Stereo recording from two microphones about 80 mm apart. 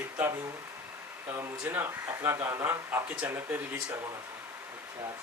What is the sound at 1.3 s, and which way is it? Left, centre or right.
Speech, right.